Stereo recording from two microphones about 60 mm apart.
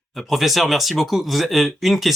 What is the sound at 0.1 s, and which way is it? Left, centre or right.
Speech, centre.